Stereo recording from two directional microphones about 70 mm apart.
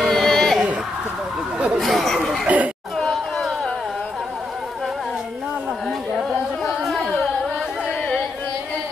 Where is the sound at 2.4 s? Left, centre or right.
Right.